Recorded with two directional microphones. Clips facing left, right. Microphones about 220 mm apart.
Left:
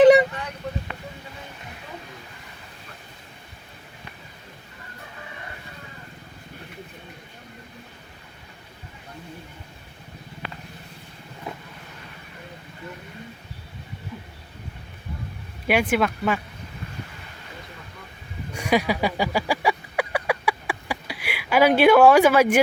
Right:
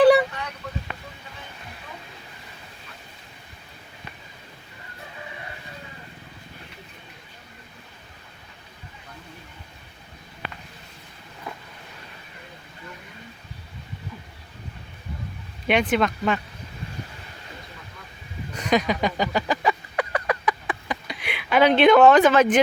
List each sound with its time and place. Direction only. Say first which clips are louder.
0.0 s vehicle: left 2 dB; 20° left (ahead or behind)
15.6 s speech: even; 10° left (ahead or behind)
18.5 s a sound: even; 10° left (ahead or behind)